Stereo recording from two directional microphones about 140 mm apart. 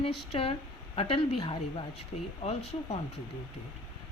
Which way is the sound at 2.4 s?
50° left (ahead or behind).